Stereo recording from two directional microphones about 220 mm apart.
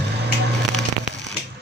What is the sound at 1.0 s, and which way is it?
Fireworks, 30° left (ahead or behind).